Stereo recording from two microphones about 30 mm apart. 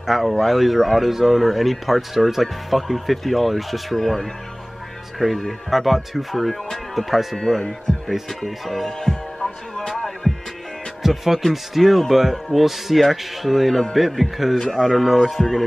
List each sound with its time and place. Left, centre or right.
0.0 s speech: centre
7.9 s music: left
8.3 s speech: centre
10.3 s music: centre
11.0 s speech: centre